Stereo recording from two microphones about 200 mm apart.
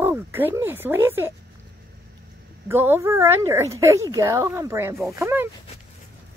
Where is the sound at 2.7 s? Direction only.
10° right (ahead or behind).